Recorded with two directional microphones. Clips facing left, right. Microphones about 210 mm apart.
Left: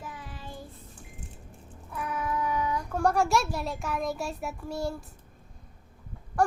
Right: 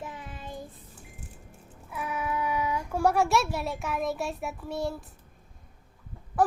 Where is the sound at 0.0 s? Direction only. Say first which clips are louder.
Right 2 dB; 20° right (ahead or behind).